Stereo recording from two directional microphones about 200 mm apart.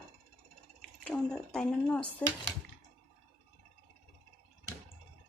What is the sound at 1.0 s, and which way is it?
Speech, 5° left (ahead or behind).